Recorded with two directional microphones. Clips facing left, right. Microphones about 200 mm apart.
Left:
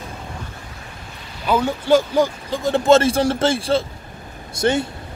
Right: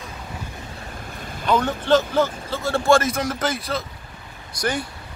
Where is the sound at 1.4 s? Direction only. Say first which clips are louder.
Left 1 dB; 10° left (ahead or behind).